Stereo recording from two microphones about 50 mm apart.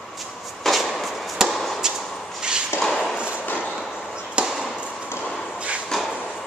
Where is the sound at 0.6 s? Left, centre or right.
Centre.